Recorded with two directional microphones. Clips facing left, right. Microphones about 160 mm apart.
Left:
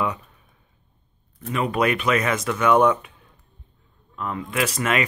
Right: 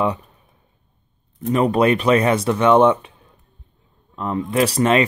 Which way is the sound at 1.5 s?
35° right (ahead or behind).